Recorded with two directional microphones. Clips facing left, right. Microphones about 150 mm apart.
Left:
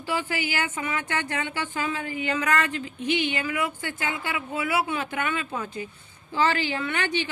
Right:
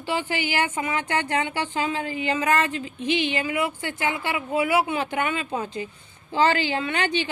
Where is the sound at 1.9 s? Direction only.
35° right (ahead or behind).